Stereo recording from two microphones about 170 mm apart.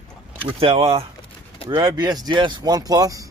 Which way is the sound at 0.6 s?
35° right (ahead or behind).